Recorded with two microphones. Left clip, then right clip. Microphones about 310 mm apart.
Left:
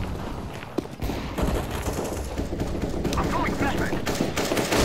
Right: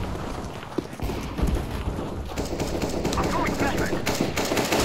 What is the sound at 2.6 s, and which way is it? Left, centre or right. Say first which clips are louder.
Clip-clop: right 5 dB; centre.